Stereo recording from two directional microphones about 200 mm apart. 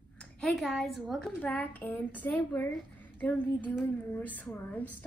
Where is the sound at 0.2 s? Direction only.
5° left (ahead or behind).